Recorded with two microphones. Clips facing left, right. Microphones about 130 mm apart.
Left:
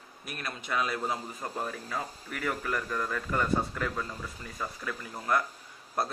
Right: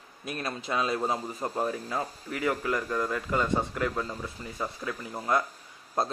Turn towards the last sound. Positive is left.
turn(degrees=-25)  # may be behind; listen again after turning